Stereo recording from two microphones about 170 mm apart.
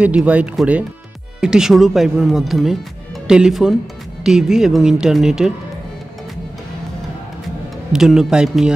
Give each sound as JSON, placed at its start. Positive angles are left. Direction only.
{"t": 0.0, "sound": "speech", "side_deg": -5}
{"t": 7.9, "sound": "speech", "side_deg": -5}